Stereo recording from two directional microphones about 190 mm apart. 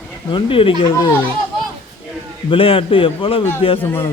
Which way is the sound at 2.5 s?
30° left (ahead or behind).